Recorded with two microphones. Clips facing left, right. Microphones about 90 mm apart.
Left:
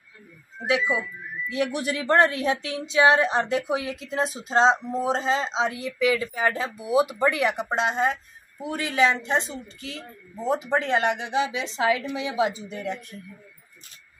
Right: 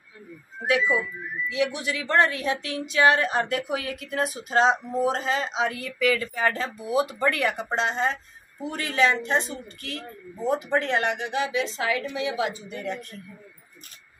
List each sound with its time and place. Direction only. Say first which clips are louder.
0.7 s speech: right 1 dB; 20° left (ahead or behind)
1.5 s speech: left 1 dB; 40° left (ahead or behind); by 13.0 s 20° left (ahead or behind)